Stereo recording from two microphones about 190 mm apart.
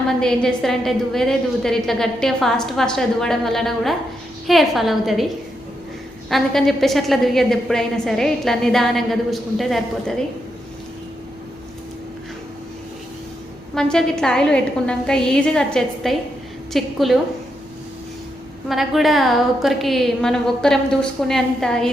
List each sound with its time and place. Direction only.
0.2 s a woman's voice: centre (ahead or behind)
6.3 s a woman's voice: centre (ahead or behind)
13.7 s a woman's voice: 5° left (ahead or behind)
18.7 s a woman's voice: centre (ahead or behind)